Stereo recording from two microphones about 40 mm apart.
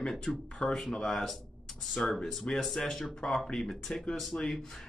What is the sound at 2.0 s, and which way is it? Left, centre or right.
Speech, left.